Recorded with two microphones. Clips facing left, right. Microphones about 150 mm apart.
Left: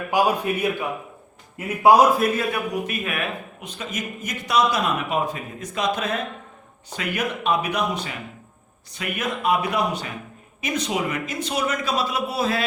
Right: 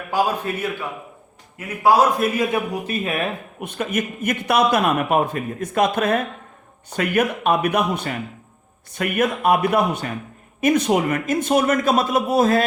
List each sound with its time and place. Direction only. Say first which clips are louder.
0.1 s a man's voice: even; 15° left (ahead or behind)
2.5 s speech: right 2 dB; 30° right (ahead or behind)
3.6 s a man's voice: right 11 dB; 55° right (ahead or behind)